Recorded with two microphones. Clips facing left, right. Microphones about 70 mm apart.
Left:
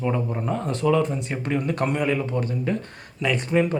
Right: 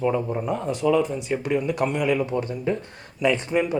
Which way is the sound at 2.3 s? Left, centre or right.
Right.